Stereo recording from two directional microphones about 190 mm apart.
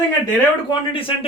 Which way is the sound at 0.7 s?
30° left (ahead or behind).